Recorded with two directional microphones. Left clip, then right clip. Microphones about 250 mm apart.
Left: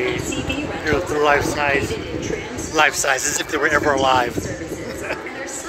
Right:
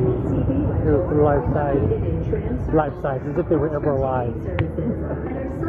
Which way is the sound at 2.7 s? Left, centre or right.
Left.